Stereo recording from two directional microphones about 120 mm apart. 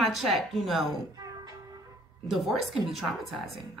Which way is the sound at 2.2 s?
Centre (ahead or behind).